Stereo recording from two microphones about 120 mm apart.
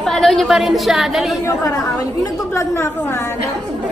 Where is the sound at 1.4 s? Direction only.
25° left (ahead or behind).